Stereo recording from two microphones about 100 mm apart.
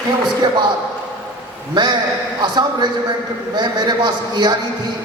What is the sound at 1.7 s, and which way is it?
A man's voice, 45° right (ahead or behind).